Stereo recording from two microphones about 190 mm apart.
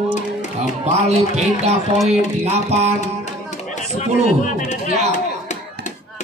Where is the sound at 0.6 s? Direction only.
35° right (ahead or behind).